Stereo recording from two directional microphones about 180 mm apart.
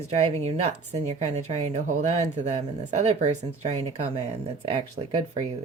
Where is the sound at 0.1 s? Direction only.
35° right (ahead or behind).